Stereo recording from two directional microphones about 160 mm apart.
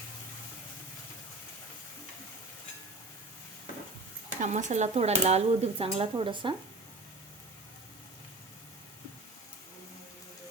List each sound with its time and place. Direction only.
4.4 s speech: 50° right (ahead or behind); by 6.5 s 30° right (ahead or behind)